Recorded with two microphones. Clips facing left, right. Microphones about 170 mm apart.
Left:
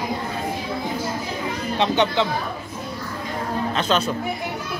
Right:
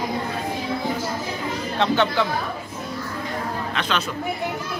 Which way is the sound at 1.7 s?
20° left (ahead or behind).